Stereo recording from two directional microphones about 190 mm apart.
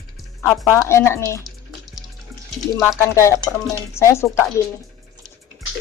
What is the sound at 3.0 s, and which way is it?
Speech, 15° left (ahead or behind).